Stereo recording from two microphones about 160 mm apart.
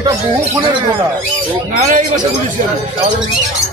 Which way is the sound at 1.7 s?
50° right (ahead or behind).